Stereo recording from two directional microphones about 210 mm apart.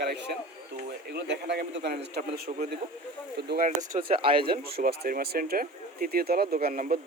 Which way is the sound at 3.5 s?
40° right (ahead or behind).